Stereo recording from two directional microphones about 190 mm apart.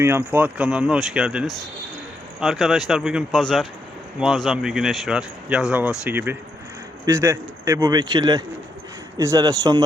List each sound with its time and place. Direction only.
0.0 s speech: 10° right (ahead or behind)